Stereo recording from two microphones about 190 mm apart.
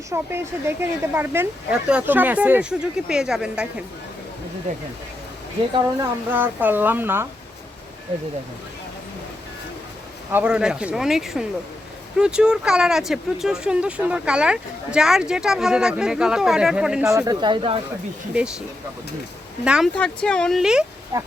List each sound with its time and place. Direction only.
0.1 s a woman's voice: 10° right (ahead or behind)
5.7 s a woman's voice: 15° right (ahead or behind)
10.3 s speech: 5° right (ahead or behind)
17.2 s speech: 20° right (ahead or behind)
19.6 s speech: 5° right (ahead or behind)
21.1 s a woman's voice: 15° right (ahead or behind)